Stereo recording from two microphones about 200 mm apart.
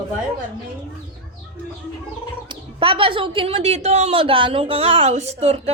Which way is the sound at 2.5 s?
25° right (ahead or behind).